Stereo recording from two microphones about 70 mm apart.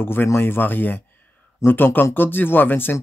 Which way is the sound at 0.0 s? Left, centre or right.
Left.